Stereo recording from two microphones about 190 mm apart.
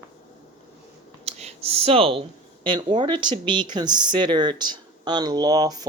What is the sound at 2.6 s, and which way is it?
Speech, 25° right (ahead or behind).